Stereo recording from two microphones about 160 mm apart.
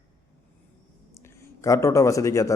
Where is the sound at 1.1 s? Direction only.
15° left (ahead or behind).